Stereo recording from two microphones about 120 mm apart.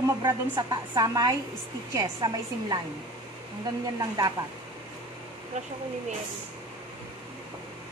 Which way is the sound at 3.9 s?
30° right (ahead or behind).